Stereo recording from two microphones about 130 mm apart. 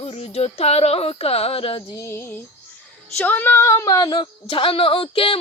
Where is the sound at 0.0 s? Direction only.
50° left (ahead or behind).